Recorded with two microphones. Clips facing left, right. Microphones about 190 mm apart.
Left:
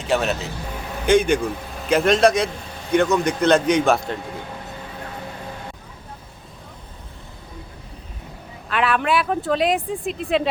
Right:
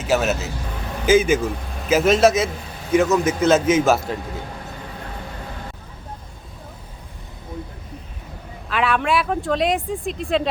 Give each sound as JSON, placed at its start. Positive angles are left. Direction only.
{"t": 0.0, "sound": "speech", "side_deg": -5}
{"t": 8.7, "sound": "speech", "side_deg": 0}